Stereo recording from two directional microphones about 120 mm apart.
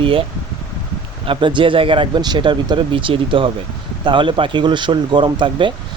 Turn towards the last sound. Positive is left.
turn(degrees=-40)  # may be behind; listen again after turning